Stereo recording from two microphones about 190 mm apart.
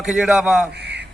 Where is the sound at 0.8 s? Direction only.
60° right (ahead or behind).